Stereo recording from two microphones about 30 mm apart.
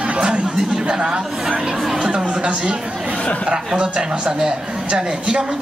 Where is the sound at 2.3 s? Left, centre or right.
Right.